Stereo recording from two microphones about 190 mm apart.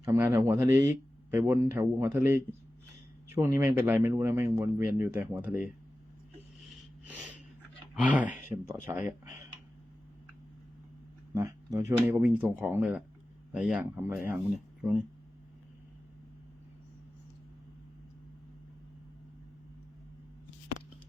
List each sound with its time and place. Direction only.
0.0 s speech: 15° right (ahead or behind)
7.0 s snort: 5° right (ahead or behind)
7.9 s speech: 10° right (ahead or behind)
11.3 s speech: 15° right (ahead or behind)